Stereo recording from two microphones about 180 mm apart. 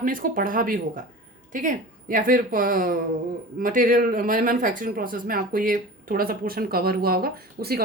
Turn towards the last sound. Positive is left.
turn(degrees=-55)  # may be behind; listen again after turning